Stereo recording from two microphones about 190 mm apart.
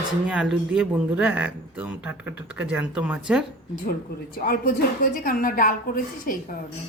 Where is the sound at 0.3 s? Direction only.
5° right (ahead or behind).